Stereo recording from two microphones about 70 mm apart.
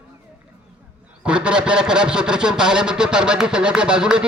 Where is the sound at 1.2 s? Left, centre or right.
Centre.